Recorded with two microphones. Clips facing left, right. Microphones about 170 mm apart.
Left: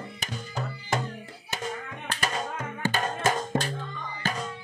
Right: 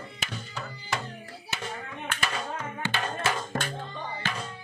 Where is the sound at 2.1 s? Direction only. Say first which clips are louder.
Left 2 dB; 40° left (ahead or behind).